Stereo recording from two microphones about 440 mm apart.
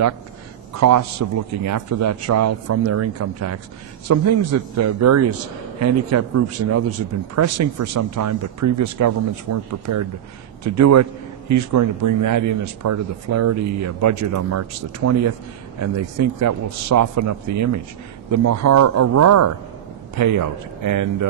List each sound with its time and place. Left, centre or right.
0.7 s a man's voice: right